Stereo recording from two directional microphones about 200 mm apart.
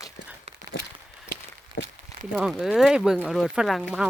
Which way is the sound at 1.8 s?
50° left (ahead or behind).